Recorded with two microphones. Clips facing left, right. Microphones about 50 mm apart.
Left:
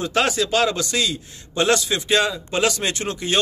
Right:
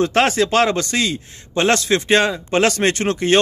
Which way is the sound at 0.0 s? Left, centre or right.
Right.